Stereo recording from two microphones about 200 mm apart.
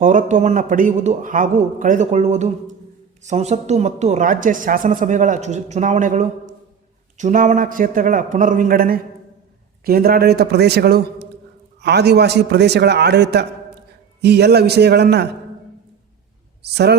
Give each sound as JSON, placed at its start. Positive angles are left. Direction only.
{"t": 0.0, "sound": "a man's voice", "side_deg": -40}
{"t": 16.6, "sound": "a man's voice", "side_deg": -55}